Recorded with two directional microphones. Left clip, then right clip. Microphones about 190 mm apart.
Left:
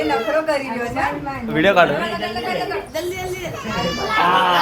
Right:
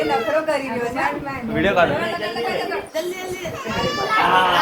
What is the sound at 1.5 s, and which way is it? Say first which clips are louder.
Speech: left 3 dB; 40° left (ahead or behind).